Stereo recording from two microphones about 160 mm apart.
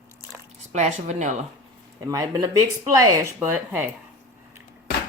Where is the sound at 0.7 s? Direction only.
45° right (ahead or behind).